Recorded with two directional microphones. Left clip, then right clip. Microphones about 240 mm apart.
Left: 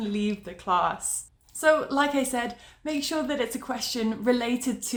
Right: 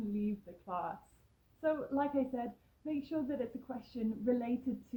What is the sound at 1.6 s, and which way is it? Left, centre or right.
A woman's voice, centre.